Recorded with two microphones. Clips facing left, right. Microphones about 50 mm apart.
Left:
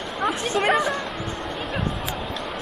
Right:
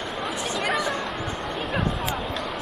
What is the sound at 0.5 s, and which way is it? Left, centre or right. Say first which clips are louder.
Chatter: left 5 dB; left.